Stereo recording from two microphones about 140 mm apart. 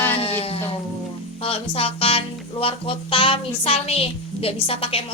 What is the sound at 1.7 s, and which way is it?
Music, 45° left (ahead or behind).